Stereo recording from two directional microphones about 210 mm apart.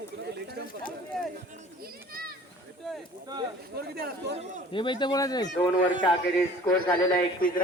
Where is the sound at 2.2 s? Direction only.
45° right (ahead or behind).